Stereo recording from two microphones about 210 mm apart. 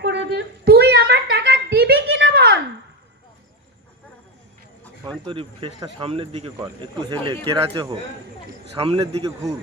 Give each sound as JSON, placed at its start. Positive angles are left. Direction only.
{"t": 0.0, "sound": "a sound", "side_deg": -55}
{"t": 5.0, "sound": "speech", "side_deg": -25}
{"t": 9.2, "sound": "speech", "side_deg": -15}